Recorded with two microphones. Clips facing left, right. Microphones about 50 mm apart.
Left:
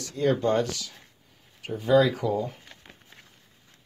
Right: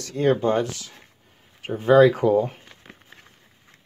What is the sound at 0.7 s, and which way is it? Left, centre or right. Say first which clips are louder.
Speech: even; right.